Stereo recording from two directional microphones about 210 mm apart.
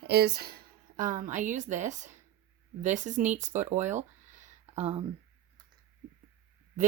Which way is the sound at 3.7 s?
35° right (ahead or behind).